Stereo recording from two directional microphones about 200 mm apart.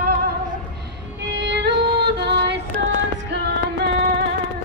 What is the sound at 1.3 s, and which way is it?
Music, 60° right (ahead or behind).